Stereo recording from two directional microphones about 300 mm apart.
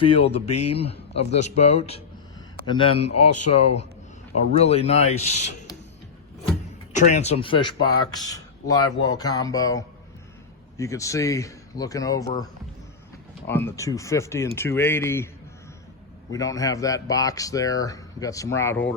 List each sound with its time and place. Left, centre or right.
0.0 s speech: centre
3.1 s speech: left
4.4 s speech: left
6.9 s speech: left
13.5 s speech: centre
16.3 s speech: centre